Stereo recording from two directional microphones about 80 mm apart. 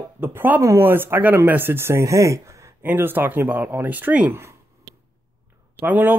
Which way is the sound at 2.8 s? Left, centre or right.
Right.